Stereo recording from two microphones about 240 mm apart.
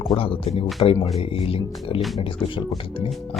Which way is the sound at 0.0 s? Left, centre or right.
Left.